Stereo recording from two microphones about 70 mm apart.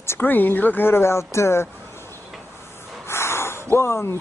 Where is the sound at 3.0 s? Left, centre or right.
Left.